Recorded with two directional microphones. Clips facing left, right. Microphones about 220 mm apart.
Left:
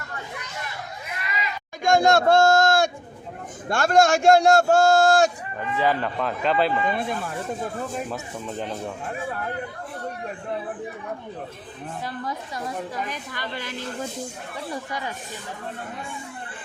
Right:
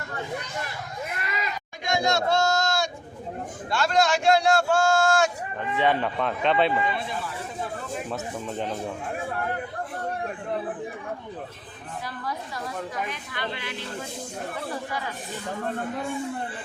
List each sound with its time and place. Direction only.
1.8 s speech: 50° left (ahead or behind); by 5.3 s 35° left (ahead or behind)
5.7 s a man's voice: centre (ahead or behind)
6.9 s speech: 50° left (ahead or behind)
8.1 s a man's voice: centre (ahead or behind)
13.1 s speech: 40° left (ahead or behind)